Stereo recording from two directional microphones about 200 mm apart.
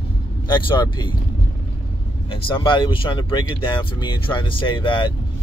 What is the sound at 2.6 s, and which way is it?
Speech, 25° left (ahead or behind).